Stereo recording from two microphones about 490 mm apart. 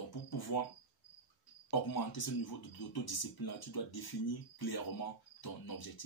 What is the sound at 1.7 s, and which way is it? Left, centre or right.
Speech, left.